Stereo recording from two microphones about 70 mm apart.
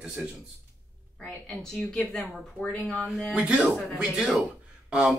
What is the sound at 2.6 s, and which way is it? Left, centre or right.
Speech, left.